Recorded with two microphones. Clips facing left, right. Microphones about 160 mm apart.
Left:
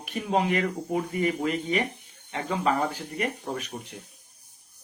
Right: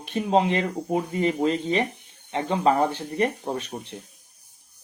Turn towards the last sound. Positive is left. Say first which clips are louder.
# right 3 dB
turn(degrees=-30)  # may be behind; listen again after turning